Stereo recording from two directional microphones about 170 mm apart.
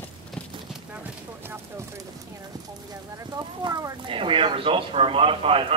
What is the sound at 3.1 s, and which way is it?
Speech, 25° right (ahead or behind).